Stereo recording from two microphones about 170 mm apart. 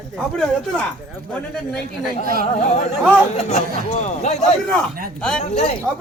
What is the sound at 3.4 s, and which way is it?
Speech, 40° left (ahead or behind).